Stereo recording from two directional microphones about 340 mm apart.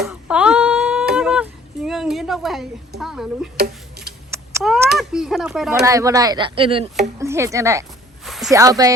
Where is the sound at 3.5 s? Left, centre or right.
Right.